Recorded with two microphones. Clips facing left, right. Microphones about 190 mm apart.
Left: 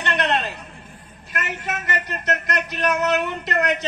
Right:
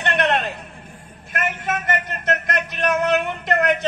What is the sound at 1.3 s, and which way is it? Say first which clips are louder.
A man's voice: right 4 dB; 50° right (ahead or behind).